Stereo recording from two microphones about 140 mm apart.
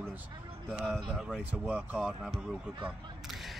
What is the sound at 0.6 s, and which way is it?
Speech, 5° right (ahead or behind).